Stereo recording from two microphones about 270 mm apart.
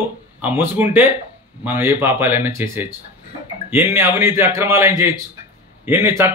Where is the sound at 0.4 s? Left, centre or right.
Centre.